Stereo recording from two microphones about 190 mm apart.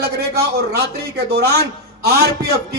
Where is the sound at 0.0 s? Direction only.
60° right (ahead or behind).